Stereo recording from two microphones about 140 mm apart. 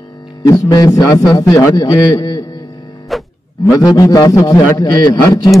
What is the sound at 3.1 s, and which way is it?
Music, centre (ahead or behind).